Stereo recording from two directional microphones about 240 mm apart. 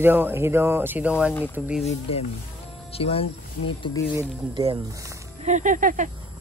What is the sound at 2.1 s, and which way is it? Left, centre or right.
Speech, left.